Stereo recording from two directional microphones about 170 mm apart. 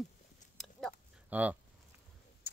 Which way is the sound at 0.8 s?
Centre (ahead or behind).